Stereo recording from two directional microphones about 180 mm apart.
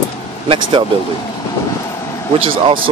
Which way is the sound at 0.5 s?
25° right (ahead or behind).